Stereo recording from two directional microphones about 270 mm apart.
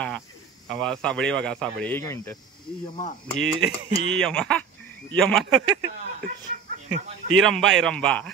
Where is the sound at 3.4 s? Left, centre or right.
Right.